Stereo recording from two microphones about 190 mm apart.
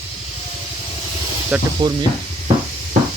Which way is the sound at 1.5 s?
5° right (ahead or behind).